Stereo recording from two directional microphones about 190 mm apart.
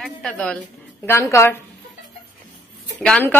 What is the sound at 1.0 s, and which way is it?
Speech, 15° left (ahead or behind).